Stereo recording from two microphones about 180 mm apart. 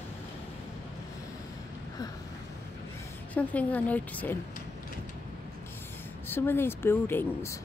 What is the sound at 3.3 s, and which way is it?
A woman's voice, 10° left (ahead or behind).